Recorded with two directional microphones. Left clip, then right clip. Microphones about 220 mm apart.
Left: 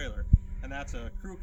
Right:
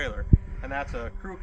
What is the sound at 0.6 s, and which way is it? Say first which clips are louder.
Speech: right 8 dB; 35° left (ahead or behind).